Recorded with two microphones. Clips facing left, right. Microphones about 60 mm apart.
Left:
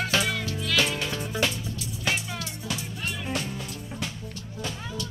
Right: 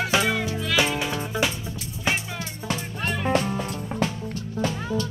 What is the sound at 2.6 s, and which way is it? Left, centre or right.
Music, right.